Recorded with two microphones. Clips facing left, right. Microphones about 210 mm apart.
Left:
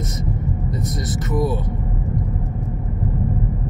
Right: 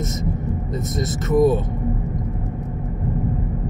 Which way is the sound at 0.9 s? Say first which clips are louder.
Right 7 dB; 25° right (ahead or behind).